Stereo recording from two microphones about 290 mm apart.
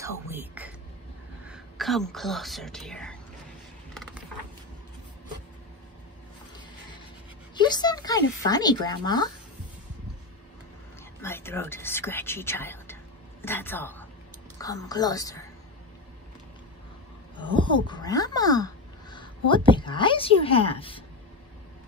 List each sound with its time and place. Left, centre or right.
0.0 s speech: centre
3.9 s mechanisms: centre
7.5 s speech: centre
11.1 s a woman's voice: centre
17.4 s speech: centre